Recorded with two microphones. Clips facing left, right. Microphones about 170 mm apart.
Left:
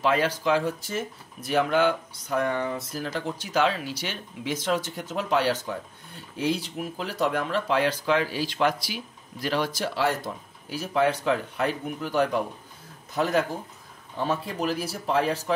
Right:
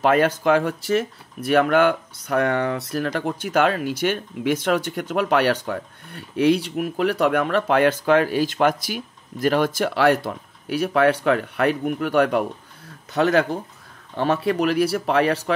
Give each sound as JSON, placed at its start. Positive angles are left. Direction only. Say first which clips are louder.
{"t": 0.0, "sound": "speech", "louder": "right 6 dB", "side_deg": -55}